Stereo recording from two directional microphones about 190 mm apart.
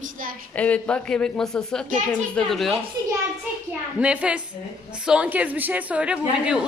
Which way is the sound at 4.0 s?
5° right (ahead or behind).